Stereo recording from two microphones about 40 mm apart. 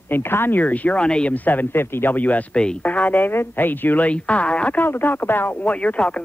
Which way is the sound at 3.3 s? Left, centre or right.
Left.